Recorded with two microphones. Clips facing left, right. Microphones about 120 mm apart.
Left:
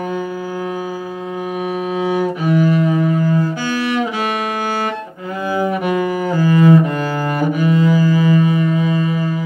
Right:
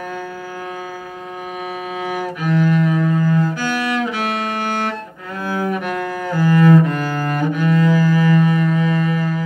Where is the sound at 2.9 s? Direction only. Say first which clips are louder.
Left 1 dB; 15° left (ahead or behind).